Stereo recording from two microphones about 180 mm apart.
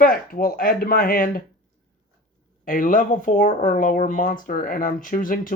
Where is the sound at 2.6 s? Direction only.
50° left (ahead or behind).